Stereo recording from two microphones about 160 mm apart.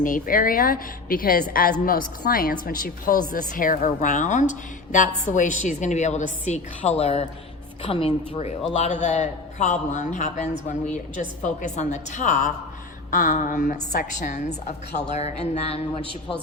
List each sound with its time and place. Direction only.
0.0 s a woman's voice: 60° left (ahead or behind); by 15.8 s 40° left (ahead or behind)